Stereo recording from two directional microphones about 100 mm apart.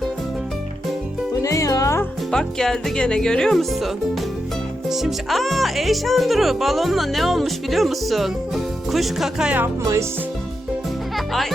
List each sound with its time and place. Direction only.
1.4 s music: 35° left (ahead or behind)
2.3 s speech: 5° left (ahead or behind)